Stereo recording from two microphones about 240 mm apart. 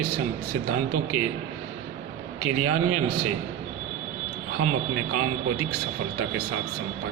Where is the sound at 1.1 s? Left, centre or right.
Right.